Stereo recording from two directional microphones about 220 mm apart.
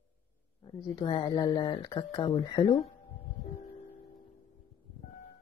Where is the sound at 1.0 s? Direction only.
20° left (ahead or behind).